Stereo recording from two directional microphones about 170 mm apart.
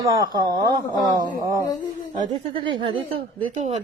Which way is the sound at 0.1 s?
20° right (ahead or behind).